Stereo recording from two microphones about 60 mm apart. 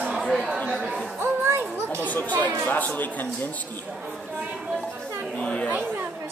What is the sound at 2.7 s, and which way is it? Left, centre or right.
Speech, left.